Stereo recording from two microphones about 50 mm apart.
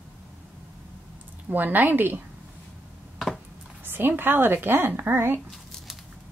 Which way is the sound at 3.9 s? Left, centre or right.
Right.